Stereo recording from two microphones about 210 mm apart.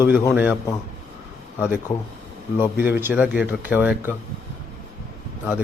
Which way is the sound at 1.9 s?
35° left (ahead or behind).